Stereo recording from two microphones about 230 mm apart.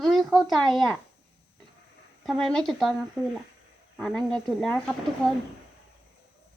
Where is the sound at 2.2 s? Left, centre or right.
Centre.